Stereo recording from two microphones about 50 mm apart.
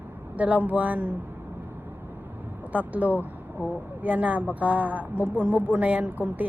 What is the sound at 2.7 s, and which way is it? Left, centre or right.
A woman's voice, right.